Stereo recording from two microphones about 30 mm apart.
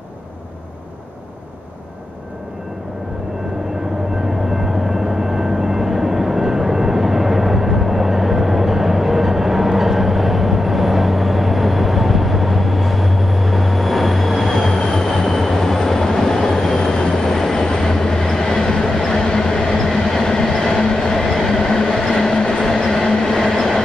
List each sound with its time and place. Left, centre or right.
4.5 s vehicle: centre
14.9 s train: centre
16.7 s train: left
17.2 s train: centre
19.2 s train: left
19.7 s train: centre
21.2 s train: centre
21.5 s train: left
21.9 s train: centre